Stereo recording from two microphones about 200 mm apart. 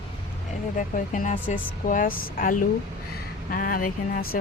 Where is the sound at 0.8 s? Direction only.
40° left (ahead or behind).